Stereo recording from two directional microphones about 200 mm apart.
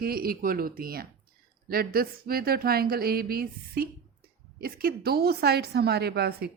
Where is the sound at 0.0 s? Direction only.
50° right (ahead or behind).